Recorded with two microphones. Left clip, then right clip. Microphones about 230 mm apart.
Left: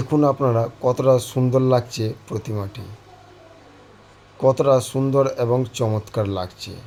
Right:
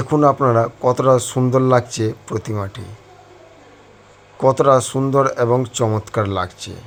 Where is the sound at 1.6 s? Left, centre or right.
Centre.